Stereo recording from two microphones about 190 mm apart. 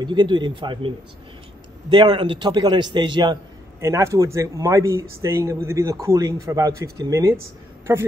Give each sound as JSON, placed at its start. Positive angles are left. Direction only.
{"t": 0.0, "sound": "a man's voice", "side_deg": -25}